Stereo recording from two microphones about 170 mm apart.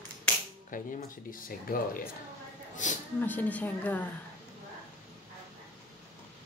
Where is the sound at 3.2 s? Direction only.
10° left (ahead or behind).